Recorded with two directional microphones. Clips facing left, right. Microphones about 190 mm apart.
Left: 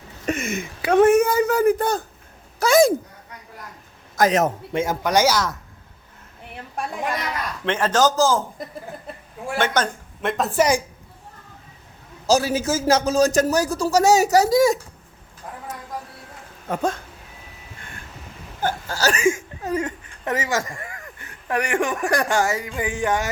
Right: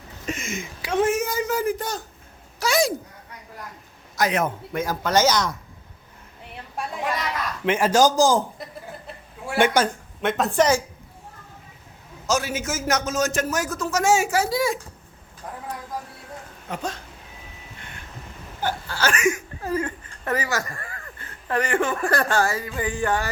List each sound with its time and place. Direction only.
0.3 s speech: 60° left (ahead or behind)
4.2 s a man's voice: 40° left (ahead or behind)
4.7 s speech: 25° left (ahead or behind)
5.0 s speech: 10° left (ahead or behind)
7.6 s a man's voice: 10° right (ahead or behind)
9.6 s a woman's voice: 10° right (ahead or behind); by 10.8 s 10° left (ahead or behind)
12.2 s a man's voice: 35° left (ahead or behind)
16.6 s speech: 50° left (ahead or behind)
18.9 s a man's voice: 40° left (ahead or behind)
19.6 s speech: 20° left (ahead or behind)